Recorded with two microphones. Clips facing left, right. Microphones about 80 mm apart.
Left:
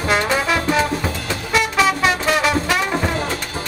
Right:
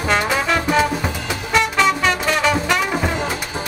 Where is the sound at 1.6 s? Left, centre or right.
Centre.